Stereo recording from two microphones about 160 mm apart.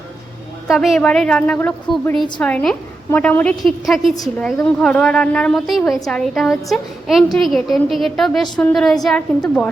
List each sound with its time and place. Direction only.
0.7 s a woman's voice: centre (ahead or behind)